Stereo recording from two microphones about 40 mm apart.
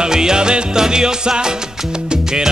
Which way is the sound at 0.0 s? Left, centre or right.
Centre.